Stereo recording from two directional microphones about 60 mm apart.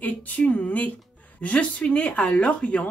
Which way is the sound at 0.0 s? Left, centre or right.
Left.